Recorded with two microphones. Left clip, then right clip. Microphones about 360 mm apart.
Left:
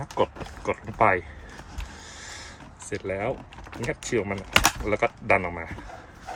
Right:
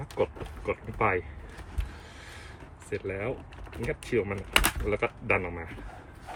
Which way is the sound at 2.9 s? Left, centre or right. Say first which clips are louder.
Left 4 dB; centre.